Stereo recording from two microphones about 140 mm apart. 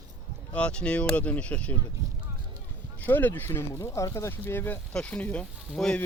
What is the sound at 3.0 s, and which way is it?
Speech, 15° left (ahead or behind).